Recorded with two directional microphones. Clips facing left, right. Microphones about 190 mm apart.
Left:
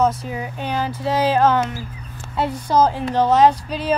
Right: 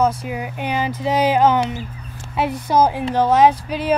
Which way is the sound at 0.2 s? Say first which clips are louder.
Right 1 dB; 10° right (ahead or behind).